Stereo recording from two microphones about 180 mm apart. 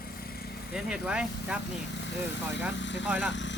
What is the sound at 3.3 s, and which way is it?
Speech, 90° left.